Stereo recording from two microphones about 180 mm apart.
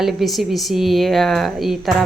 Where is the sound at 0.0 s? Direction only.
Centre (ahead or behind).